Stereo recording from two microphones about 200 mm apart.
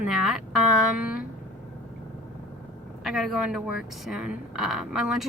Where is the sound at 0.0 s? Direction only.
Centre (ahead or behind).